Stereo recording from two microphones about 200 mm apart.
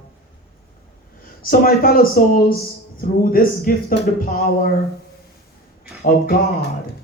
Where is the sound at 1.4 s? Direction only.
50° left (ahead or behind).